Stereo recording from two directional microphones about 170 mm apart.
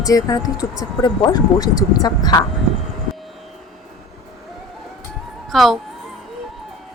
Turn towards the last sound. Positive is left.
turn(degrees=0)  # may be behind; listen again after turning